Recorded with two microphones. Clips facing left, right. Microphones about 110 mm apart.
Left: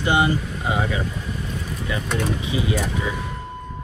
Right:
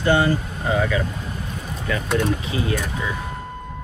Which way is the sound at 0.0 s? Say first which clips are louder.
Right 1 dB; 15° left (ahead or behind).